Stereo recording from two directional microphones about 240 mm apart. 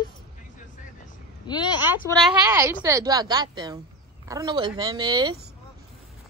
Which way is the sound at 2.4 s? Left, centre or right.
Centre.